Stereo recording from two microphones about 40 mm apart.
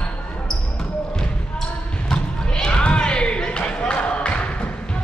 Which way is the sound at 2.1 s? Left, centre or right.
Centre.